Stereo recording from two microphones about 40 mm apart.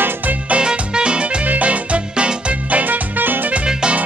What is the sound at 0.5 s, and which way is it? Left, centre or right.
Music, right.